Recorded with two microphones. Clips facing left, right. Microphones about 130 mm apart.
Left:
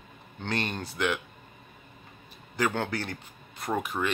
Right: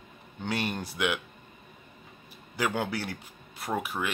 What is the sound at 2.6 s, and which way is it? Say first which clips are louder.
Speech: left 1 dB; 10° right (ahead or behind).